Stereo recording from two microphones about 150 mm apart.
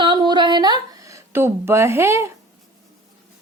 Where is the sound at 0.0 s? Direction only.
30° right (ahead or behind).